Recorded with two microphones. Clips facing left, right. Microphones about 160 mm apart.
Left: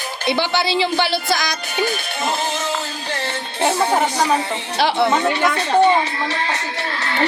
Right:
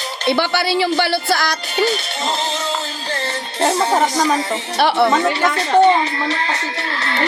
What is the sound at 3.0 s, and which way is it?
Music, 15° left (ahead or behind).